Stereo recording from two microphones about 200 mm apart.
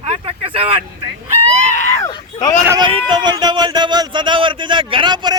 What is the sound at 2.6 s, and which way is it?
Speech, 15° right (ahead or behind).